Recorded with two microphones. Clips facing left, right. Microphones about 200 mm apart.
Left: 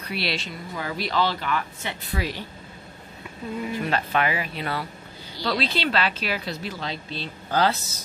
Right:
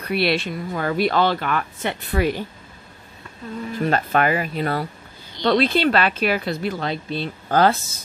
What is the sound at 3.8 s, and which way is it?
Speech, 45° right (ahead or behind).